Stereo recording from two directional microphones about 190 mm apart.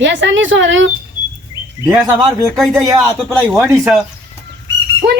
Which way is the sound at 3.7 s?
15° right (ahead or behind).